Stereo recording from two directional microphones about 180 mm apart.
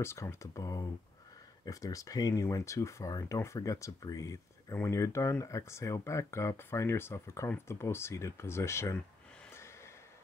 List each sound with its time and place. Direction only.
0.0 s speech: 15° left (ahead or behind)